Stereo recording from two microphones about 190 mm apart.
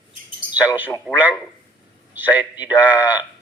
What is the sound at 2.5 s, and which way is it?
Speech, 20° left (ahead or behind).